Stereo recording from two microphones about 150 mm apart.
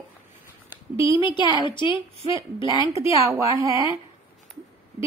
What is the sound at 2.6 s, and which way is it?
Speech, 20° right (ahead or behind).